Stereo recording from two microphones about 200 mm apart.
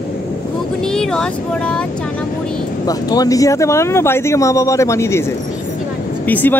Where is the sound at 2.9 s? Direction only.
20° left (ahead or behind).